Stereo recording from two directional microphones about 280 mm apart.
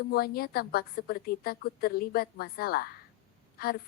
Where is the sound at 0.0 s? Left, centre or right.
Left.